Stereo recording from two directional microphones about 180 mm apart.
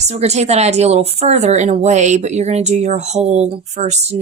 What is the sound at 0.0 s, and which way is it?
Speech, 40° right (ahead or behind).